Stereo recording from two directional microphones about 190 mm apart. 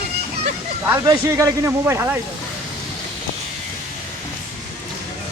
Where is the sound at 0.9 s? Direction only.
15° right (ahead or behind).